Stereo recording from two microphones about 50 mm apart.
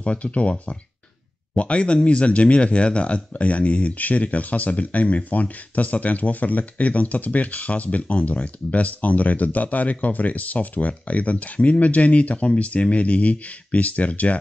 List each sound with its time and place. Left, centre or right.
0.0 s speech: left